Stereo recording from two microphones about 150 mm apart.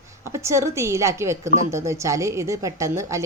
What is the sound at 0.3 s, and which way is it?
A woman's voice, 20° right (ahead or behind).